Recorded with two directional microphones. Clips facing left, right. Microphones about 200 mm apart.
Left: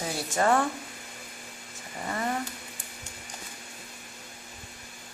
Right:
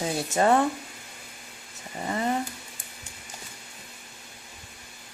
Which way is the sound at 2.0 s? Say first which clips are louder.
Right 3 dB; 20° right (ahead or behind).